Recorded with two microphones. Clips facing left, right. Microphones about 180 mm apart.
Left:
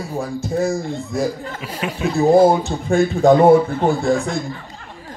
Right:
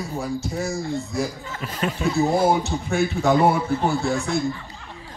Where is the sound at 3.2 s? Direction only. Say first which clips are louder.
Left 9 dB; 50° left (ahead or behind).